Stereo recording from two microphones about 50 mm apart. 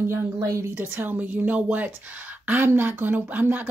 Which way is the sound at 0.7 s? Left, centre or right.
Right.